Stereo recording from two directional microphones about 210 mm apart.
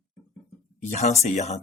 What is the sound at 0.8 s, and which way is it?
Speech, 30° left (ahead or behind).